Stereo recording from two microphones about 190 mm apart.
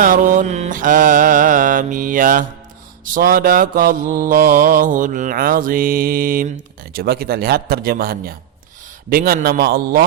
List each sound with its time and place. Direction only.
0.0 s mantra: 45° right (ahead or behind)